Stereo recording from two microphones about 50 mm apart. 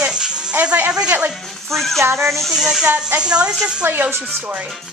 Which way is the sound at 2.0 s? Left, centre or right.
Right.